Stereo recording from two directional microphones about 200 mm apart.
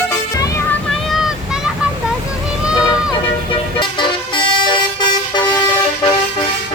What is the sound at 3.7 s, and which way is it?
Vehicle, 25° left (ahead or behind).